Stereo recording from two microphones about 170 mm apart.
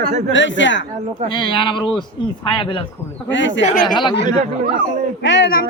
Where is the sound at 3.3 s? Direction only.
90° left.